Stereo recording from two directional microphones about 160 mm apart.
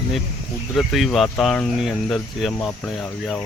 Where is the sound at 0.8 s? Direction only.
Centre (ahead or behind).